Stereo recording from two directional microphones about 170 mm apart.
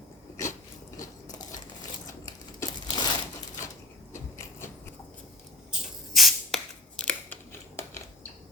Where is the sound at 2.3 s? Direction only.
25° left (ahead or behind).